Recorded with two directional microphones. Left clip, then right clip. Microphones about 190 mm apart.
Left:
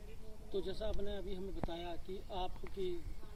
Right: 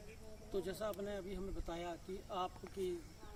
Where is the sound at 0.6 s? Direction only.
15° right (ahead or behind).